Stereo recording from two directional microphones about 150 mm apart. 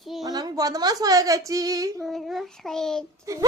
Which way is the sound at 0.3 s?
25° right (ahead or behind).